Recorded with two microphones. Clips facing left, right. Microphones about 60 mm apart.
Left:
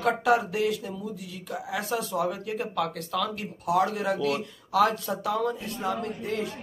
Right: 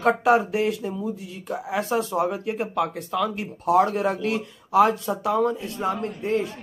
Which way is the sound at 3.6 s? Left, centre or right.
Right.